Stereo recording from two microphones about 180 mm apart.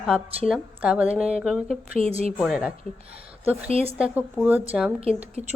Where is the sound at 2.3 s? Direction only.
5° right (ahead or behind).